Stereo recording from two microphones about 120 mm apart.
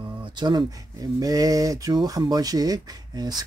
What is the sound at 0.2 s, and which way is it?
Speech, 40° right (ahead or behind).